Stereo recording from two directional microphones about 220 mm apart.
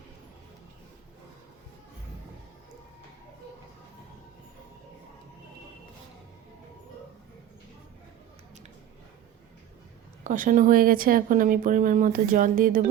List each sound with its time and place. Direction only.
10.2 s speech: 35° right (ahead or behind)